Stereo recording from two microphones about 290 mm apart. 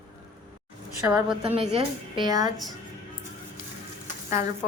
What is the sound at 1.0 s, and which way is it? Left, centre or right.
A woman's voice, centre.